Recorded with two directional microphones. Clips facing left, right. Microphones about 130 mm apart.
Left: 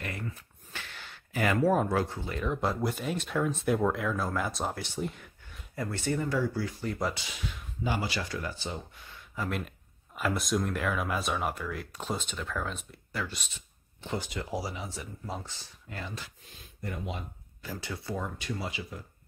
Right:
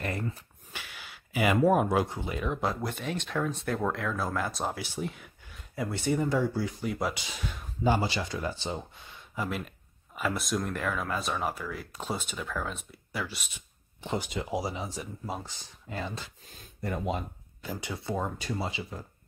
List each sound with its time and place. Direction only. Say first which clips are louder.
0.0 s a sound: right 5 dB; 35° right (ahead or behind)
0.7 s speech: even; 10° right (ahead or behind)
2.4 s speech: left 2 dB; centre (ahead or behind); by 6.9 s 20° right (ahead or behind)
6.9 s speech: even; 5° right (ahead or behind)
7.8 s speech: right 5 dB; 30° right (ahead or behind)
9.5 s speech: even; centre (ahead or behind)
14.0 s speech: right 2 dB; 20° right (ahead or behind)
16.8 s speech: right 6 dB; 45° right (ahead or behind)
17.6 s speech: right 2 dB; 20° right (ahead or behind)